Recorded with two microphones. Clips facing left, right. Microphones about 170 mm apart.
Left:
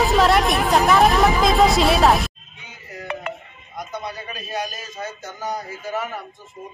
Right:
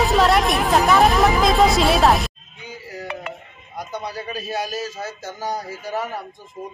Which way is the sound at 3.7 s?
35° right (ahead or behind).